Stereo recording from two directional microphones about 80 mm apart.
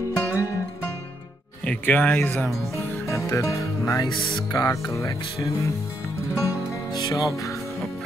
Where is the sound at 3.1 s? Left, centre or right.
Left.